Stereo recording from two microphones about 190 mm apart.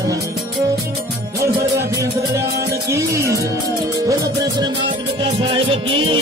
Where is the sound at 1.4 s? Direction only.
15° right (ahead or behind).